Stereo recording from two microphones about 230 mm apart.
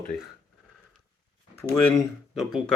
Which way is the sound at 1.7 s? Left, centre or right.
Centre.